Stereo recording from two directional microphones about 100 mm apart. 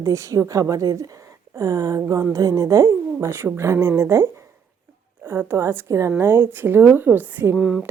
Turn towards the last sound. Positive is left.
turn(degrees=-5)  # may be behind; listen again after turning